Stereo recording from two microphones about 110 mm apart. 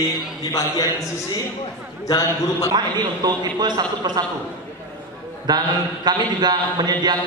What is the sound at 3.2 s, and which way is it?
A man's voice, 35° right (ahead or behind).